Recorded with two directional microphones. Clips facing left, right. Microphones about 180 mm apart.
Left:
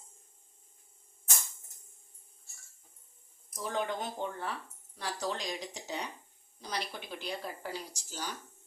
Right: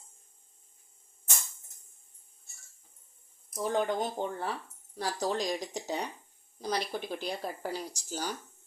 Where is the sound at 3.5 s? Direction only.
45° right (ahead or behind).